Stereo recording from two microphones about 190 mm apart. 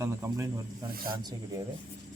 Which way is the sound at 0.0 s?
15° right (ahead or behind).